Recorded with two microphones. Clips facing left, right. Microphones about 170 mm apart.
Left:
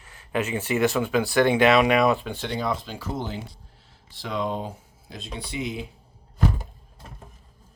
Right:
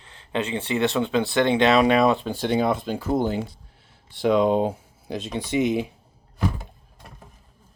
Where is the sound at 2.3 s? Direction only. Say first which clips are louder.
Right 6 dB; 50° right (ahead or behind); by 5.6 s 65° right (ahead or behind).